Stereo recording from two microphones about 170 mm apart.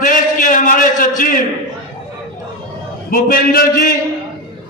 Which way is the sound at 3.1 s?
55° left (ahead or behind).